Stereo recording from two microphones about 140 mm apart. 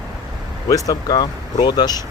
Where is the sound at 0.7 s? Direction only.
25° left (ahead or behind).